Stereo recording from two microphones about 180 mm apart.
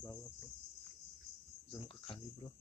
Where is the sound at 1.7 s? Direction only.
30° left (ahead or behind).